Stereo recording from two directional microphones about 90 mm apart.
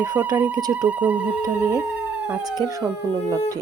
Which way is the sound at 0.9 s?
15° right (ahead or behind).